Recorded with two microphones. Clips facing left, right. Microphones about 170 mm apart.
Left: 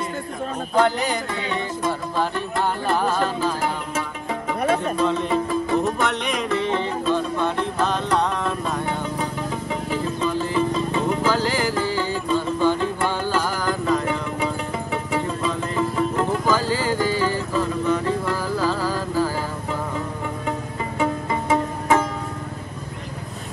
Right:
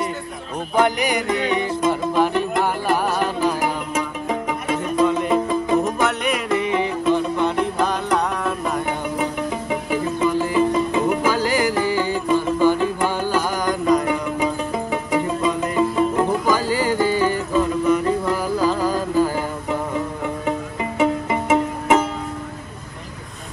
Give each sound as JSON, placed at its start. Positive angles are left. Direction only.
{"t": 0.7, "sound": "music", "side_deg": -15}
{"t": 21.0, "sound": "music", "side_deg": -20}